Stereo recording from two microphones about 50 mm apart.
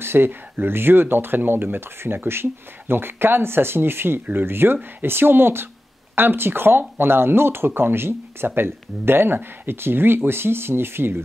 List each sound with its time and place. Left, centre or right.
0.0 s speech: right